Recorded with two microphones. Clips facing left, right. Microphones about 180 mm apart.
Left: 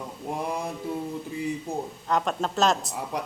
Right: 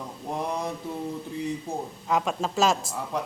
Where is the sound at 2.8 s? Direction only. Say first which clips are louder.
Right 1 dB; 20° left (ahead or behind).